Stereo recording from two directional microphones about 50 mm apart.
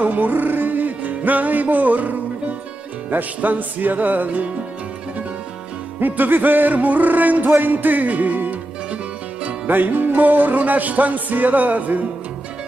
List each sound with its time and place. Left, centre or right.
0.0 s music: right
5.9 s music: right
9.7 s music: right